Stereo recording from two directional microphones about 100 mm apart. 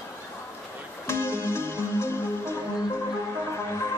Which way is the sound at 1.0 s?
25° left (ahead or behind).